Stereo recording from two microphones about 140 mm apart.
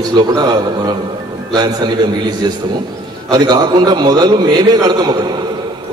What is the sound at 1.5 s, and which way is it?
Speech, 30° right (ahead or behind).